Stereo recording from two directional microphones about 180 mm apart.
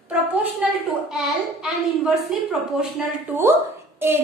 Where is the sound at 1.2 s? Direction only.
Centre (ahead or behind).